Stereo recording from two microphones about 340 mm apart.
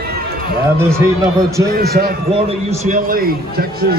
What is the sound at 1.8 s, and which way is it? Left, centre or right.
A man's voice, right.